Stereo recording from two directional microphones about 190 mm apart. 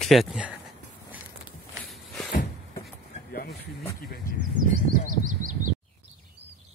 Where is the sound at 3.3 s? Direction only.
50° left (ahead or behind).